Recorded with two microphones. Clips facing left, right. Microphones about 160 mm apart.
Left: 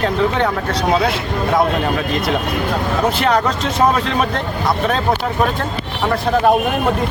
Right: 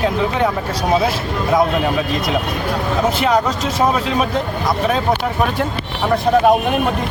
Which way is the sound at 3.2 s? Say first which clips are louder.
Even; 5° right (ahead or behind).